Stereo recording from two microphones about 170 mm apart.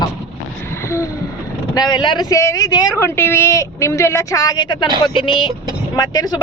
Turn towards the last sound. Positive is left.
turn(degrees=20)  # may be behind; listen again after turning